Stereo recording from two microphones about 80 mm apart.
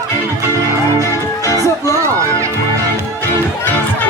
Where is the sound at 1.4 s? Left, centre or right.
Left.